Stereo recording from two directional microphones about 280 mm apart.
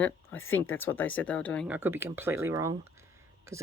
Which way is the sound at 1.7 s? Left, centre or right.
Centre.